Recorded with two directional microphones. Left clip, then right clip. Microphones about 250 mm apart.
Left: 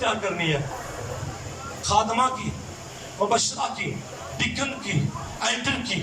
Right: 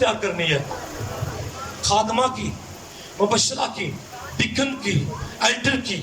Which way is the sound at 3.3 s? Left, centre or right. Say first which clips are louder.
Right 2 dB; right.